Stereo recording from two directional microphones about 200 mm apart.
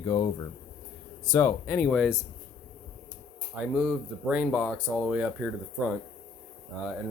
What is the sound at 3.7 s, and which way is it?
Speech, 5° right (ahead or behind).